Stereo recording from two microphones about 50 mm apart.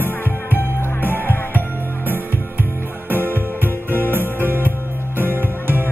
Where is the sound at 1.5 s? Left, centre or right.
Right.